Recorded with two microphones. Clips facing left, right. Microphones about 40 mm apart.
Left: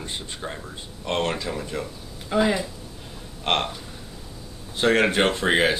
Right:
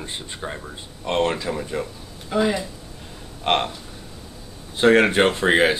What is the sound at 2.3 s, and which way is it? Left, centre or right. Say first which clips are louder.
Speech: even; centre.